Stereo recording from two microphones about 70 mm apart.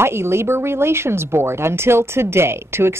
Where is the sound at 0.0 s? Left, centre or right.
Right.